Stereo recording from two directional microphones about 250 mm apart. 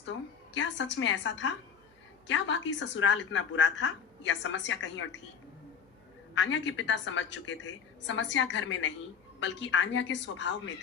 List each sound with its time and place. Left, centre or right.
0.5 s a woman's voice: left
6.3 s a woman's voice: left